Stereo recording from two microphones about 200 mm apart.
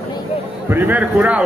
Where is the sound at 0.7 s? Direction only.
10° right (ahead or behind).